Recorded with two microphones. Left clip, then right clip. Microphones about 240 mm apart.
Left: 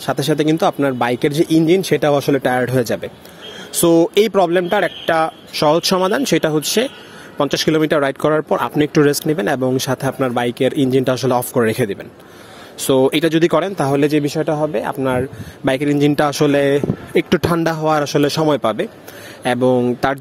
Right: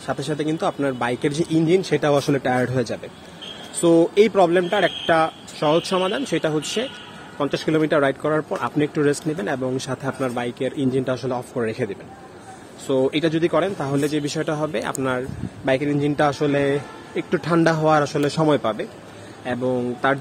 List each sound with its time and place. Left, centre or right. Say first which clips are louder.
0.0 s speech: left 8 dB; left
14.2 s speech: left 6 dB; left
15.6 s speech: left 5 dB; left